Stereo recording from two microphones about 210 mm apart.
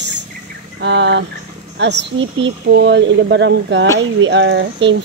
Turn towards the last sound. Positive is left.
turn(degrees=-55)  # may be behind; listen again after turning